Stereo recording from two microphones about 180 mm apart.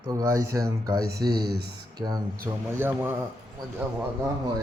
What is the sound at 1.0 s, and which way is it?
Speech, 60° right (ahead or behind).